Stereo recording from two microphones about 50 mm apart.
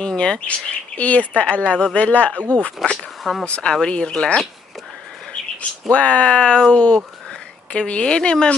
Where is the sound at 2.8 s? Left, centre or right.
Centre.